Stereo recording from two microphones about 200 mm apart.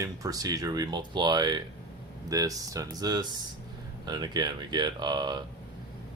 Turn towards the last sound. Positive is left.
turn(degrees=-20)  # may be behind; listen again after turning